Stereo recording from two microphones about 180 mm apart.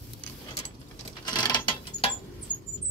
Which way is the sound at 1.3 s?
25° left (ahead or behind).